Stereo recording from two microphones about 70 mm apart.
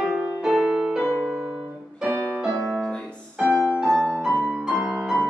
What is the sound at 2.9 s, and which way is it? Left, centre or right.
Music, centre.